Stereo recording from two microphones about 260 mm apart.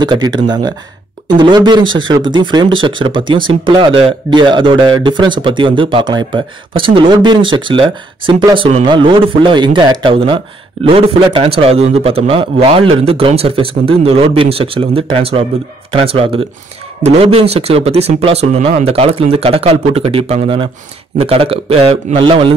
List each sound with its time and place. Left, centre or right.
0.0 s speech: centre